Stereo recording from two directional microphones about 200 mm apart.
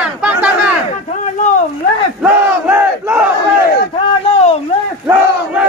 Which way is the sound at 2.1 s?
10° right (ahead or behind).